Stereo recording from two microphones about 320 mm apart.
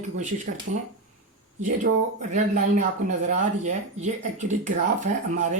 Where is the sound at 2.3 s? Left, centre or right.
Right.